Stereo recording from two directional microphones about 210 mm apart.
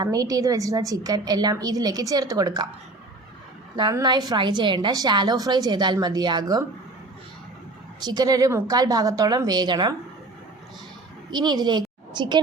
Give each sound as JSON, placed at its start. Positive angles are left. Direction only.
{"t": 0.0, "sound": "a woman's voice", "side_deg": -15}
{"t": 3.8, "sound": "a woman's voice", "side_deg": -20}
{"t": 8.0, "sound": "a woman's voice", "side_deg": -20}
{"t": 11.3, "sound": "a woman's voice", "side_deg": -20}